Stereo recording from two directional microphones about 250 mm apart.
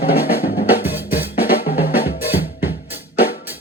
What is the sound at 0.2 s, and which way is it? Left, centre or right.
Drum, left.